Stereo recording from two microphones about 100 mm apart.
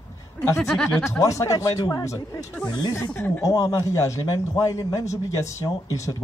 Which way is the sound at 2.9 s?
20° left (ahead or behind).